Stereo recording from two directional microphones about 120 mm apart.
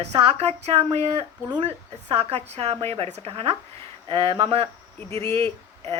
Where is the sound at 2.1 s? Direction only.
60° right (ahead or behind).